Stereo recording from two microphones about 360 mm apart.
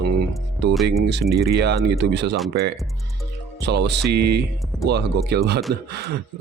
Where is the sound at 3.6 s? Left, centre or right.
Right.